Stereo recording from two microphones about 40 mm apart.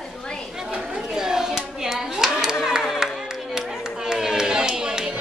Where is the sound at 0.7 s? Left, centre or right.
Centre.